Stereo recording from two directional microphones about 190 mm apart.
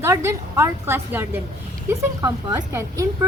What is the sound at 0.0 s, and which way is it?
Speech, 15° right (ahead or behind).